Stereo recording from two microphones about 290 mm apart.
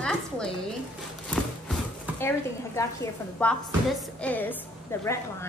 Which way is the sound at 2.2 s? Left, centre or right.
Centre.